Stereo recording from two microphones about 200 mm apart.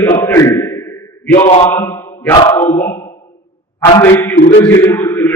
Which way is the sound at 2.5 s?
10° left (ahead or behind).